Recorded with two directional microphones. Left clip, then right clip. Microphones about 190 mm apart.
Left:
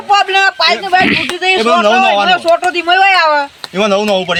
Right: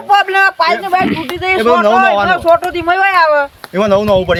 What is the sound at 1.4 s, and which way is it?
Speech, 35° right (ahead or behind).